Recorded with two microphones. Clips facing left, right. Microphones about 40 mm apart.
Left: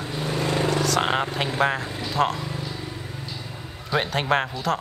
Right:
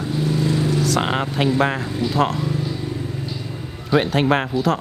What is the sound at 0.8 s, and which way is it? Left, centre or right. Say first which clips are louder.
Speech: right 2 dB; centre.